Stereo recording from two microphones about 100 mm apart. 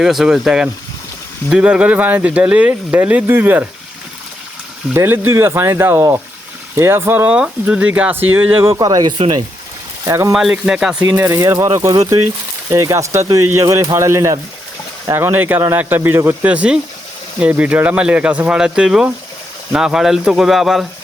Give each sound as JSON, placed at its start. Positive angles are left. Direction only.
{"t": 0.0, "sound": "speech", "side_deg": -5}
{"t": 4.9, "sound": "speech", "side_deg": -20}
{"t": 7.3, "sound": "speech", "side_deg": -10}
{"t": 8.8, "sound": "speech", "side_deg": -40}
{"t": 10.1, "sound": "speech", "side_deg": -30}
{"t": 10.3, "sound": "speech", "side_deg": -5}
{"t": 11.3, "sound": "speech", "side_deg": -40}
{"t": 16.5, "sound": "speech", "side_deg": -10}